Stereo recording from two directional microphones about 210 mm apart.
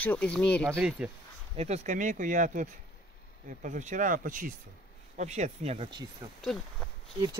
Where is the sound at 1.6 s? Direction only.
35° right (ahead or behind).